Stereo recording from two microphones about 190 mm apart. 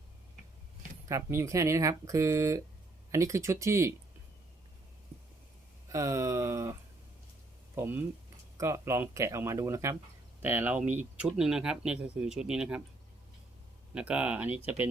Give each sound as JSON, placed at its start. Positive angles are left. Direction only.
{"t": 1.0, "sound": "speech", "side_deg": -15}
{"t": 5.9, "sound": "speech", "side_deg": -15}
{"t": 7.8, "sound": "speech", "side_deg": -10}
{"t": 13.9, "sound": "speech", "side_deg": -5}